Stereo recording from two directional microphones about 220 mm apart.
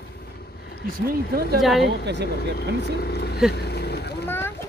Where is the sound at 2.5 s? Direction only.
45° left (ahead or behind).